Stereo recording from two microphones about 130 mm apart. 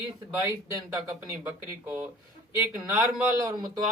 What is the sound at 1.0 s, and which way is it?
Speech, 15° right (ahead or behind).